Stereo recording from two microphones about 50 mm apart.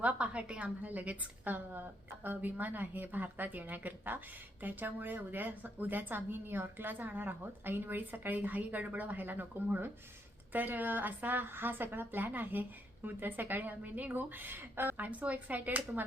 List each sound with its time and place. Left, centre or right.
0.0 s a woman's voice: right
0.8 s speech: right